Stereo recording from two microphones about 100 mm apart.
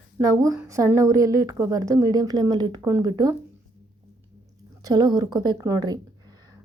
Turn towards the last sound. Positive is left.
turn(degrees=-35)  # may be behind; listen again after turning